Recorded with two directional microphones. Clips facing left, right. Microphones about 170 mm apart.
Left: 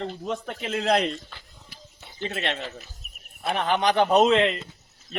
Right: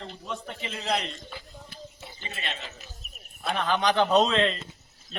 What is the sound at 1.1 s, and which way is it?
Speech, 5° right (ahead or behind).